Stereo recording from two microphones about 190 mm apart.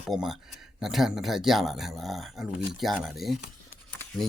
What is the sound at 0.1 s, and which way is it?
Speech, centre (ahead or behind).